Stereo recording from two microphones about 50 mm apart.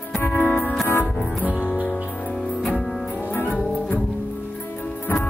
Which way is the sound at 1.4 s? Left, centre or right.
Right.